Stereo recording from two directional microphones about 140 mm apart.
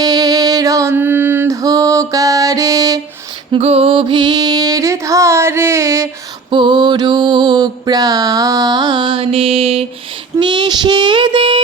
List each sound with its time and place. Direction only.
0.0 s mantra: 25° right (ahead or behind)
3.5 s music: 45° right (ahead or behind); by 6.1 s 20° right (ahead or behind)
6.5 s mantra: 35° right (ahead or behind)
10.3 s mantra: 35° right (ahead or behind)